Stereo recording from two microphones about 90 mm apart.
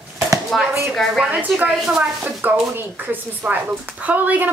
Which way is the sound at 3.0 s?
20° right (ahead or behind).